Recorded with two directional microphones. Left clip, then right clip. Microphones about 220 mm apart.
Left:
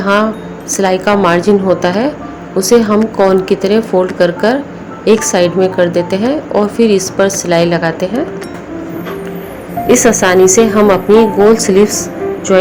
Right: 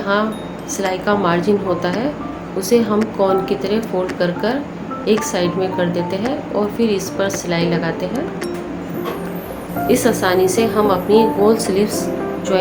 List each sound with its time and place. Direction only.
0.0 s a woman's voice: 35° left (ahead or behind)
9.8 s a woman's voice: 30° left (ahead or behind)